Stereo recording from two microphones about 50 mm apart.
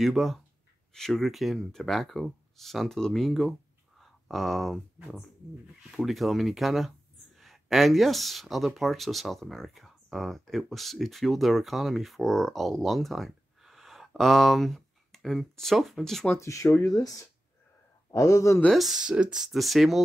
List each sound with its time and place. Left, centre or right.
0.0 s speech: centre
4.0 s a sound: centre
5.9 s speech: centre
16.3 s speech: left
18.1 s speech: left
18.7 s speech: centre
18.9 s speech: centre
19.4 s speech: centre